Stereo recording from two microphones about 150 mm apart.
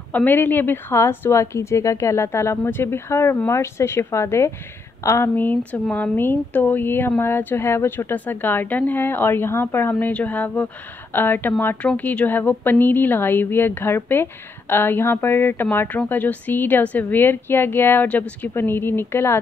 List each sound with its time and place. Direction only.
0.1 s speech: 10° left (ahead or behind)